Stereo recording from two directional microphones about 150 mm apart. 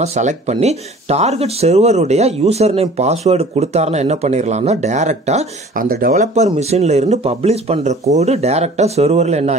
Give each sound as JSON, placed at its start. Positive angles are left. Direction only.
{"t": 0.0, "sound": "speech", "side_deg": -50}
{"t": 5.8, "sound": "speech", "side_deg": -75}
{"t": 6.1, "sound": "speech", "side_deg": -50}